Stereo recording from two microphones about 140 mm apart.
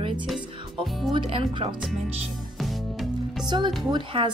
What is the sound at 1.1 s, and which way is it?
Speech, 40° right (ahead or behind).